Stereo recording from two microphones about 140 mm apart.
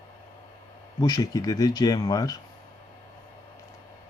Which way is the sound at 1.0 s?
25° left (ahead or behind).